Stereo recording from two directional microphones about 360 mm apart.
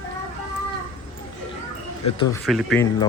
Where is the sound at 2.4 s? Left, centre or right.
Centre.